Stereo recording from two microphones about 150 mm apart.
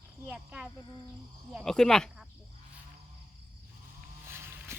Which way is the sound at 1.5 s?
5° left (ahead or behind).